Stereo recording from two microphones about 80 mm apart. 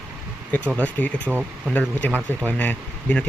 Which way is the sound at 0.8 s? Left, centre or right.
Centre.